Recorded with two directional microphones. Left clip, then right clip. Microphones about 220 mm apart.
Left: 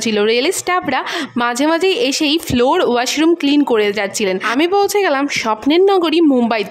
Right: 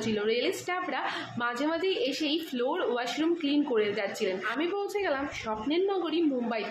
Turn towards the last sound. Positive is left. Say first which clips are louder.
# left 15 dB
turn(degrees=55)  # may be behind; listen again after turning